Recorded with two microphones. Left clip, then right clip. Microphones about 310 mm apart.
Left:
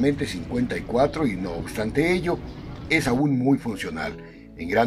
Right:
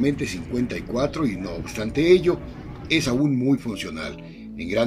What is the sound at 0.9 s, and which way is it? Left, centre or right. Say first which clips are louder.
Speech: left 3 dB; centre.